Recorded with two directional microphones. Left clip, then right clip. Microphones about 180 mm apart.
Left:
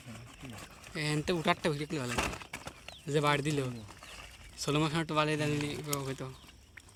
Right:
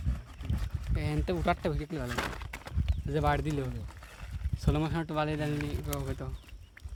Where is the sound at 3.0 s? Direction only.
50° right (ahead or behind).